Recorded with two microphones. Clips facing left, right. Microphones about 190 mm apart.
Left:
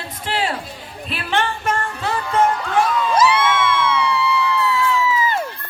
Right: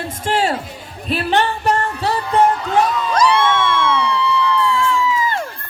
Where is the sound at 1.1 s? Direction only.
40° right (ahead or behind).